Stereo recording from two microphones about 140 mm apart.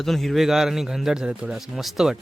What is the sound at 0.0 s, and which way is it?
A man's voice, centre (ahead or behind).